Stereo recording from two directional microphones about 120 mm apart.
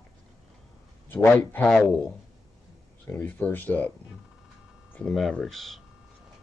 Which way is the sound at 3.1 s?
15° left (ahead or behind).